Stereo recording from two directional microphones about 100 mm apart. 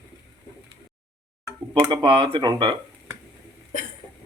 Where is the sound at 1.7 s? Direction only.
50° right (ahead or behind).